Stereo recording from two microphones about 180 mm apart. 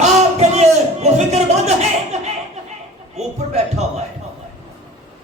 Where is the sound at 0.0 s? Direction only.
40° right (ahead or behind).